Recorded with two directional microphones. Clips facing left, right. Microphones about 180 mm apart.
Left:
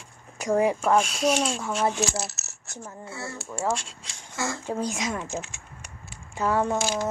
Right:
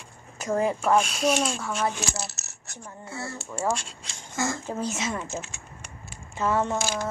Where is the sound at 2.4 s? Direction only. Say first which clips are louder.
Left 1 dB; 35° right (ahead or behind).